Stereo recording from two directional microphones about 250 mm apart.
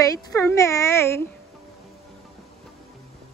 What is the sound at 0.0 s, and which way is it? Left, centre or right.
A woman's voice, centre.